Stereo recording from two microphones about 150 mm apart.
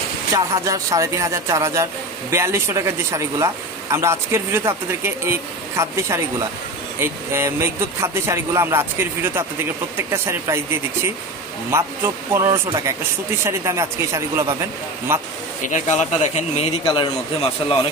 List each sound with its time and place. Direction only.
0.3 s speech: 20° right (ahead or behind)
11.7 s speech: 15° right (ahead or behind)
15.6 s speech: 55° left (ahead or behind)
16.8 s a man's voice: 30° left (ahead or behind)